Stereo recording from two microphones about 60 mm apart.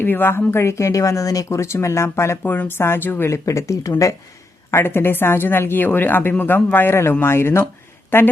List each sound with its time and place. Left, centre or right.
0.0 s speech: left
2.4 s a woman's voice: left
3.2 s speech: left
4.7 s a woman's voice: left